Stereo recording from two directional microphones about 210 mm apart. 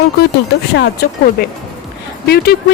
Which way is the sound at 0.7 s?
50° left (ahead or behind).